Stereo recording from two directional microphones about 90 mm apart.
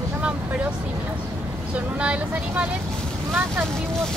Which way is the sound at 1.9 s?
15° right (ahead or behind).